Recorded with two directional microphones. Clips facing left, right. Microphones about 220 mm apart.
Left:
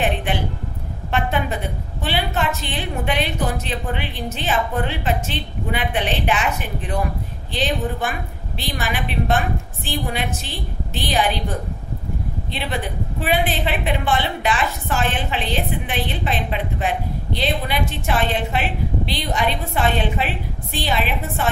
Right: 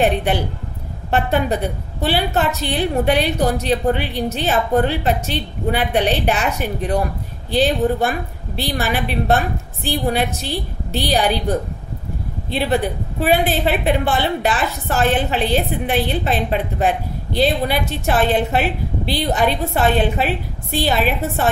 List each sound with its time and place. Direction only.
0.0 s a woman's voice: 40° right (ahead or behind)
13.2 s a woman's voice: 40° right (ahead or behind)